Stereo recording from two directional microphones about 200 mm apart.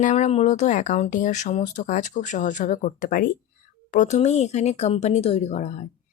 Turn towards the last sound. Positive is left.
turn(degrees=35)  # may be behind; listen again after turning